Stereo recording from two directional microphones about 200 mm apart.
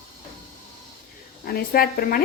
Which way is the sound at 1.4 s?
50° left (ahead or behind).